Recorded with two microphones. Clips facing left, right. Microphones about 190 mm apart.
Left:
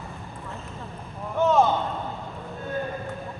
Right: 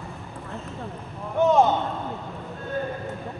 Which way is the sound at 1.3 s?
15° right (ahead or behind).